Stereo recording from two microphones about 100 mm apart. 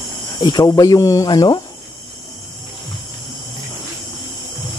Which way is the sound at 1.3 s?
45° left (ahead or behind).